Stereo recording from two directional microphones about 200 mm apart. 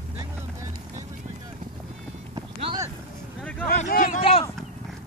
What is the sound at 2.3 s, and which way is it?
Clip-clop, 25° right (ahead or behind).